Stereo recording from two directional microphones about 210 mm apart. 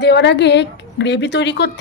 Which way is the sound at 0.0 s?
55° left (ahead or behind).